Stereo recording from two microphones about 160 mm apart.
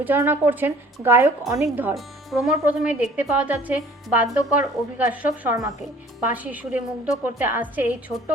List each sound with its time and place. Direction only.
0.0 s a woman's voice: 10° right (ahead or behind)
2.0 s a woman's voice: centre (ahead or behind)